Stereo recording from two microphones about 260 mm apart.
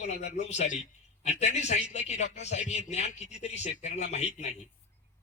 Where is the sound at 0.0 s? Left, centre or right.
Left.